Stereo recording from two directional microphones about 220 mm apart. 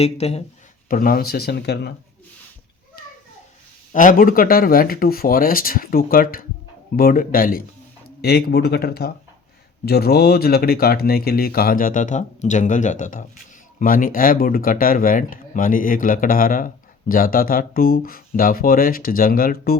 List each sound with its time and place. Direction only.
0.0 s speech: 30° left (ahead or behind)
0.9 s speech: 40° left (ahead or behind)
3.9 s speech: 40° left (ahead or behind)